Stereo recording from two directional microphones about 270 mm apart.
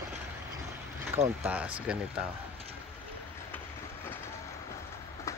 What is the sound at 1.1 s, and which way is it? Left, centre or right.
Speech, centre.